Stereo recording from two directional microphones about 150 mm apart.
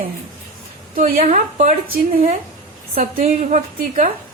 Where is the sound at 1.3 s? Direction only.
50° right (ahead or behind).